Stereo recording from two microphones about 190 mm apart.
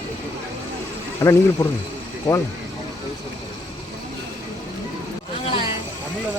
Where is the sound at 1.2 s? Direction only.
15° left (ahead or behind).